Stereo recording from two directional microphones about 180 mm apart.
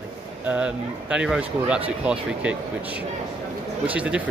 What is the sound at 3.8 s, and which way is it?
Speech, 5° right (ahead or behind).